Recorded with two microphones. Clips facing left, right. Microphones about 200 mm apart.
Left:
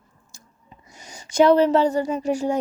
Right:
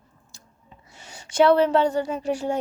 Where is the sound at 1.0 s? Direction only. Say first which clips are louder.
Left 2 dB; 10° left (ahead or behind).